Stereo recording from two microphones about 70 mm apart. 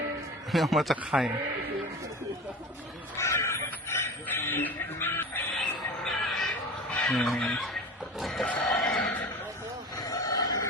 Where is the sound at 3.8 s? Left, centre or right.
Left.